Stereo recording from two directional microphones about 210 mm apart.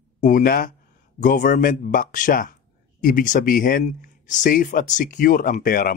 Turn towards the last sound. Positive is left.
turn(degrees=45)  # may be behind; listen again after turning